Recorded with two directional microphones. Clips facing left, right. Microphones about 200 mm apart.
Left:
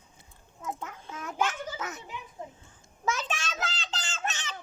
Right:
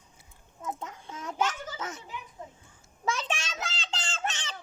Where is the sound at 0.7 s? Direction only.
25° right (ahead or behind).